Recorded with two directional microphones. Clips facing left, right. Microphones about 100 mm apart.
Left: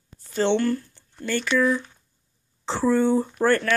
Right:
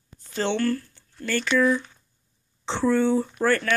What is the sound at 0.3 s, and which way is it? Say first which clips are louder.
Speech: left 3 dB; 15° left (ahead or behind).